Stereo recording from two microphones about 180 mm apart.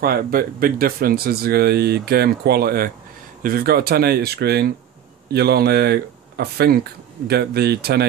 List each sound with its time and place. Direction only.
0.0 s speech: 55° right (ahead or behind)